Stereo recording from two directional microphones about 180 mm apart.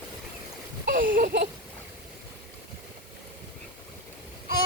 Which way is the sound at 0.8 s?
50° right (ahead or behind).